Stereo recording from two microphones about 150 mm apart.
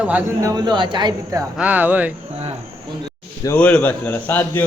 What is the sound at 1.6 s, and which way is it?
Speech, 10° right (ahead or behind).